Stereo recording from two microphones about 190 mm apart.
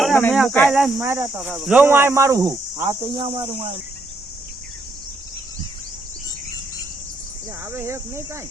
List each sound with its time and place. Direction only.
0.0 s speech: 5° left (ahead or behind)
1.0 s speech: 10° right (ahead or behind)
7.6 s speech: 15° right (ahead or behind)